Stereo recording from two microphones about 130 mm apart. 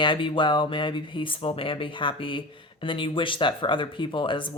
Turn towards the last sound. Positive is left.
turn(degrees=40)  # may be behind; listen again after turning